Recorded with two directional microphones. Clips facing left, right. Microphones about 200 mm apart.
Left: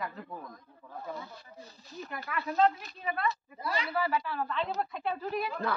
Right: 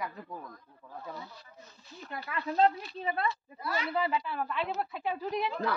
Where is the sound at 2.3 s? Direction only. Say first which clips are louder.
Even; 25° right (ahead or behind).